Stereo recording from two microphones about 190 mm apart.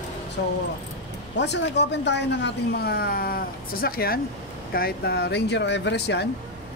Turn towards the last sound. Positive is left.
turn(degrees=60)  # may be behind; listen again after turning